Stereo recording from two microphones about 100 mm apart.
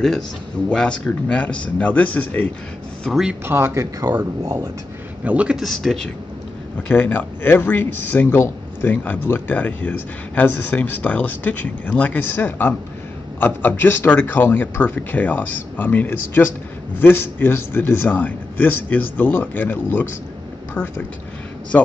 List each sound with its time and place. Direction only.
0.7 s speech: 10° left (ahead or behind)
3.0 s speech: 5° right (ahead or behind)
3.4 s speech: 25° right (ahead or behind); by 4.6 s 40° right (ahead or behind)
5.2 s a man's voice: 15° right (ahead or behind)
5.6 s speech: centre (ahead or behind)
6.9 s speech: 15° left (ahead or behind)